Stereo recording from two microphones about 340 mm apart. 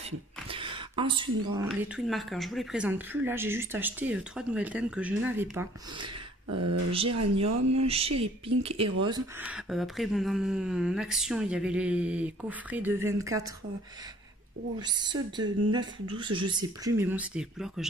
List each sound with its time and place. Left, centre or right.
0.5 s a woman's voice: centre
6.5 s speech: right
7.8 s a woman's voice: centre
14.8 s speech: centre